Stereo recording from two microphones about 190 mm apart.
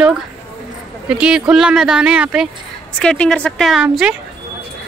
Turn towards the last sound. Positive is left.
turn(degrees=-5)  # may be behind; listen again after turning